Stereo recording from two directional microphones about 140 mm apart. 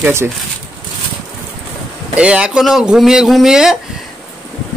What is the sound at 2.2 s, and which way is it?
Speech, 5° right (ahead or behind).